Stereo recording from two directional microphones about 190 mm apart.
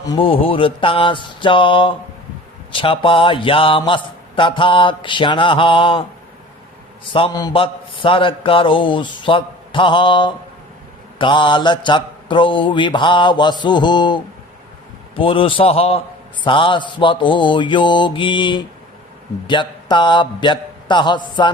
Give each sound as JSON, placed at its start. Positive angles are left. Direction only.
{"t": 0.0, "sound": "a man's voice", "side_deg": 25}
{"t": 7.1, "sound": "a man's voice", "side_deg": 25}